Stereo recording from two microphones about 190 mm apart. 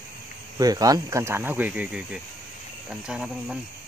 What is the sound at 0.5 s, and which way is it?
Speech, 20° right (ahead or behind).